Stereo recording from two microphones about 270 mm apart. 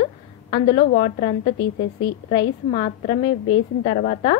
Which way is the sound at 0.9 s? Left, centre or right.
Left.